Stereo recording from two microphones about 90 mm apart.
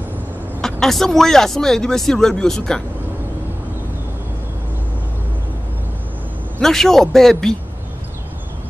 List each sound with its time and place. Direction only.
0.6 s speech: 5° left (ahead or behind)
6.6 s speech: 5° left (ahead or behind)